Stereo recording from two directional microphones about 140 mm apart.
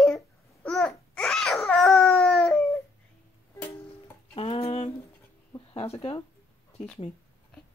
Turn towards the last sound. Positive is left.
turn(degrees=40)  # may be behind; listen again after turning